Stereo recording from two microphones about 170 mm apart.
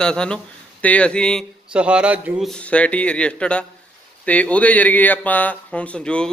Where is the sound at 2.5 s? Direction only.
5° left (ahead or behind).